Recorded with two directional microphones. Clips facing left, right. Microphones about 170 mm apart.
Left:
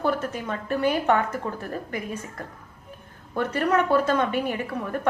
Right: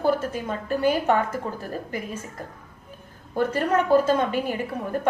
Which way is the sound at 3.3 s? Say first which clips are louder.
Right 1 dB; 35° right (ahead or behind).